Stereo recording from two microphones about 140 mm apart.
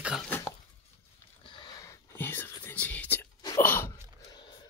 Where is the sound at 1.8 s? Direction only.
20° left (ahead or behind).